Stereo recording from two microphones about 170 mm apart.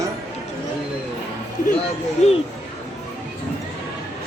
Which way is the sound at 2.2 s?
40° left (ahead or behind).